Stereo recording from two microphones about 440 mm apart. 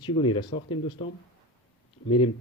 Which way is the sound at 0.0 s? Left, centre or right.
Centre.